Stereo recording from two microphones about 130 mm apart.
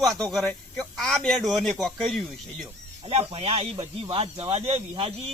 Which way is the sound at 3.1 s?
50° right (ahead or behind).